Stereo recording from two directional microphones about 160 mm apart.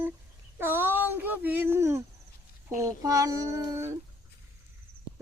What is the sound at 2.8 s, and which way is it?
Speech, 20° right (ahead or behind).